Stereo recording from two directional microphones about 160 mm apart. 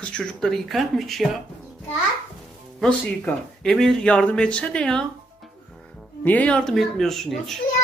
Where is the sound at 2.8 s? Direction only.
5° left (ahead or behind).